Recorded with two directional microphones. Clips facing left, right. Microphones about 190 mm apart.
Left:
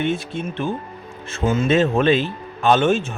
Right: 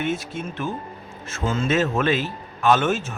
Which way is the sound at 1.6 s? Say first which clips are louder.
Left 4 dB; 30° left (ahead or behind).